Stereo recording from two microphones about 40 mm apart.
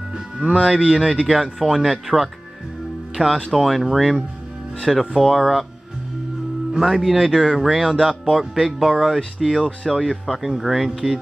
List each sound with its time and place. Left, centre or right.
0.4 s speech: right
0.8 s speech: centre
1.2 s speech: centre
6.8 s speech: centre